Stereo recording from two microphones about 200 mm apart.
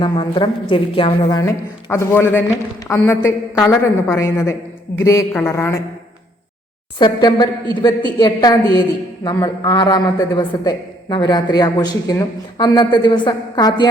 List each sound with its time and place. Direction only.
0.0 s a man's voice: 25° left (ahead or behind)
1.4 s a woman's voice: 15° left (ahead or behind)
7.0 s a man's voice: 25° left (ahead or behind)